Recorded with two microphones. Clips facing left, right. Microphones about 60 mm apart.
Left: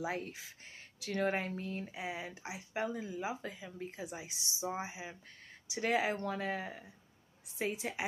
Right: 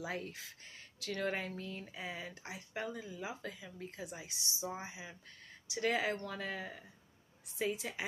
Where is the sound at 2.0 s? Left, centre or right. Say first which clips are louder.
Left 3 dB; centre.